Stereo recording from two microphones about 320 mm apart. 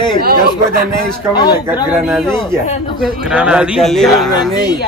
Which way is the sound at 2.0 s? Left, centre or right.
Centre.